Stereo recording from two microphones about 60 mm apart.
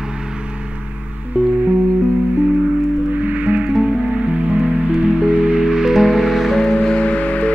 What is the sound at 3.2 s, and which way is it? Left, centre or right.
Music, right.